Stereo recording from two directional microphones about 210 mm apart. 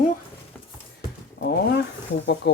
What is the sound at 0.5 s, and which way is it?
Horse, 10° left (ahead or behind).